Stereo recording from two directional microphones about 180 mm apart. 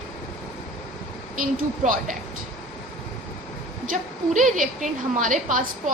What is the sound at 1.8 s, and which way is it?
Speech, 50° right (ahead or behind).